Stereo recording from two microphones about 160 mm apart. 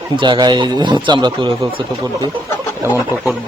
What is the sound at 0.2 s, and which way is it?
A man's voice, 30° right (ahead or behind).